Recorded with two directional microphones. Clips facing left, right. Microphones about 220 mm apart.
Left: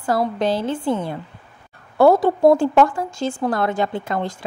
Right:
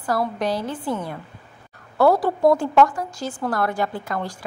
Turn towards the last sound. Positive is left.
turn(degrees=25)  # may be behind; listen again after turning